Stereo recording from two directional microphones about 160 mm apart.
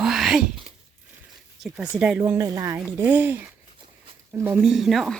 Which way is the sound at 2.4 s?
20° right (ahead or behind).